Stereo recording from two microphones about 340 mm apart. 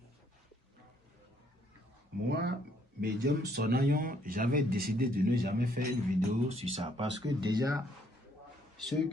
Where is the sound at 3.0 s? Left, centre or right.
Right; by 7.8 s centre.